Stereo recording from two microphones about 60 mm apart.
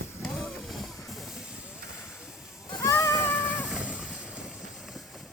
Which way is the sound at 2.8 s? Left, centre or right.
Left.